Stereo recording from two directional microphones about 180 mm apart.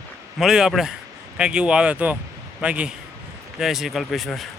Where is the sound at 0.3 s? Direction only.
5° right (ahead or behind).